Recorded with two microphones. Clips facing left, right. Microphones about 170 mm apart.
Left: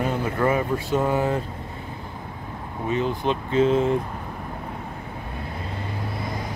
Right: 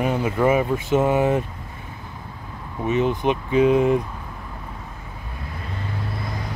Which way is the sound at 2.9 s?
20° right (ahead or behind).